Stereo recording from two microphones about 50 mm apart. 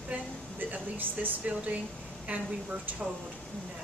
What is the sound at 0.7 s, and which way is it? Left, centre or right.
Speech, right.